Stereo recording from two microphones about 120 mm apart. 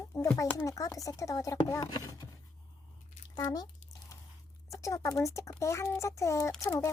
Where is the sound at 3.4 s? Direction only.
35° left (ahead or behind).